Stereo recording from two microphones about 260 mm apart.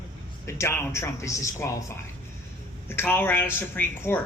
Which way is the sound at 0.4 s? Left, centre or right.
Centre.